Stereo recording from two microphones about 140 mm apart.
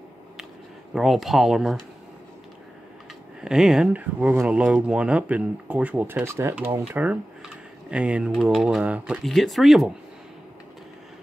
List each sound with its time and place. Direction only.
0.9 s speech: centre (ahead or behind)
3.3 s speech: 5° right (ahead or behind)